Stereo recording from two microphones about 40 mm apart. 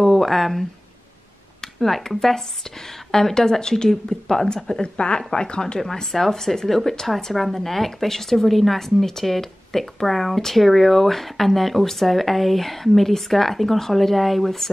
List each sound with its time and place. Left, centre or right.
0.0 s a sound: centre
1.6 s speech: centre
5.8 s speech: centre